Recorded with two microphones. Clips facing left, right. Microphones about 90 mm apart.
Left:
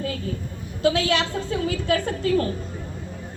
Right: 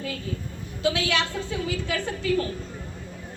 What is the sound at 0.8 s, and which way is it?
A woman's voice, 40° left (ahead or behind).